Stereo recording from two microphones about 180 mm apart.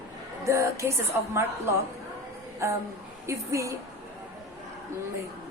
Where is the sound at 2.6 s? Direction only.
15° right (ahead or behind).